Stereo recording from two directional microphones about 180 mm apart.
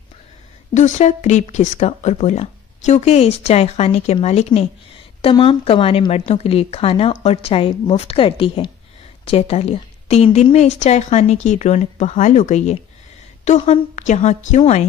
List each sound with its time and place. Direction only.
0.7 s speech: 40° left (ahead or behind)